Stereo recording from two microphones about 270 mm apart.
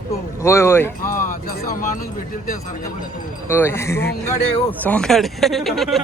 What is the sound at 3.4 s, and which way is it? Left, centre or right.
Speech, centre.